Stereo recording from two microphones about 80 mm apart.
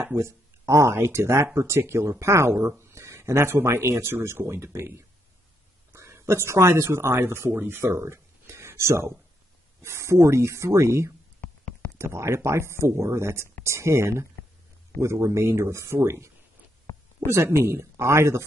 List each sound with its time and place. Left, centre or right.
0.0 s speech: right
16.9 s a sound: left
17.3 s speech: right